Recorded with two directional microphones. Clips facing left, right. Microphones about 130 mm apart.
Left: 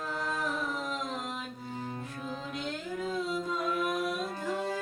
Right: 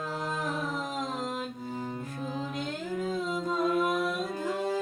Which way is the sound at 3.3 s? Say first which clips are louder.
Right 4 dB; 40° right (ahead or behind).